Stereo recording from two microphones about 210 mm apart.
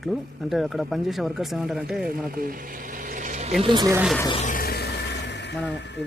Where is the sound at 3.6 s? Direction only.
20° right (ahead or behind).